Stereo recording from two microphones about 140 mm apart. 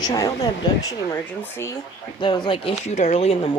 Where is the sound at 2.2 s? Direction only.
35° left (ahead or behind).